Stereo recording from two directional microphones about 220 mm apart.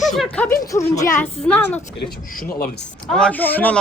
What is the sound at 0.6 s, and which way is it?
A man's voice, 15° left (ahead or behind).